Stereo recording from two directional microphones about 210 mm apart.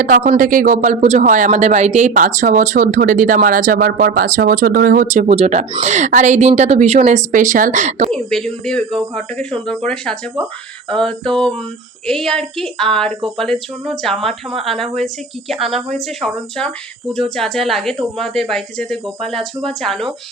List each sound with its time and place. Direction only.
0.0 s speech: 40° right (ahead or behind)
8.1 s speech: 5° left (ahead or behind)